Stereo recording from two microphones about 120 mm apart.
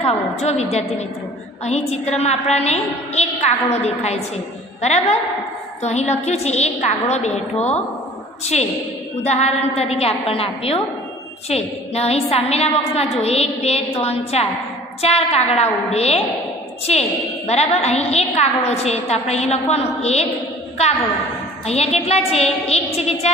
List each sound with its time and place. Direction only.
0.0 s a woman's voice: 60° left (ahead or behind)
8.5 s a woman's voice: 65° left (ahead or behind)
17.5 s a woman's voice: 60° left (ahead or behind)
21.6 s a woman's voice: 60° left (ahead or behind)